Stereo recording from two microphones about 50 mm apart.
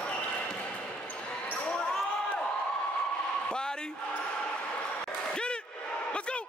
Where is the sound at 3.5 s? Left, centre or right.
Centre.